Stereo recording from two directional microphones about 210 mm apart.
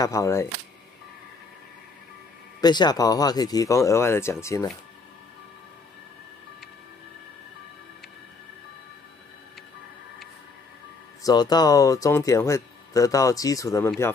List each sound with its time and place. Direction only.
0.0 s speech: 15° left (ahead or behind)
2.6 s speech: 20° left (ahead or behind)
11.2 s speech: 20° left (ahead or behind)